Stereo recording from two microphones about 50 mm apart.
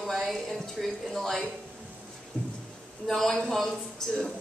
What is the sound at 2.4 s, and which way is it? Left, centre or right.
Speech, centre.